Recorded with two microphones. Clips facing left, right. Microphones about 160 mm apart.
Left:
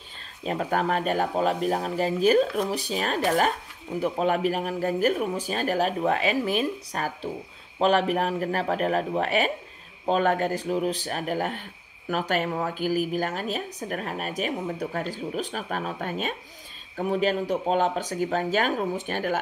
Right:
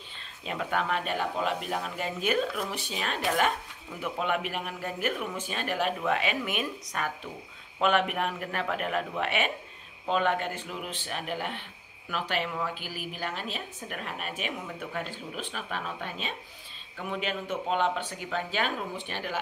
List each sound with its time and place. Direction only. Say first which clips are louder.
0.5 s a woman's voice: left 5 dB; 40° left (ahead or behind)